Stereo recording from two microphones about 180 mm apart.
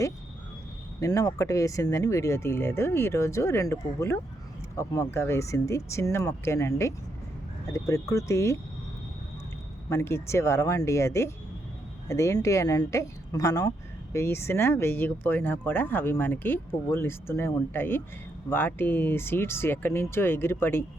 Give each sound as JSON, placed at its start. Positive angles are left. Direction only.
{"t": 0.9, "sound": "speech", "side_deg": 20}
{"t": 9.9, "sound": "speech", "side_deg": 15}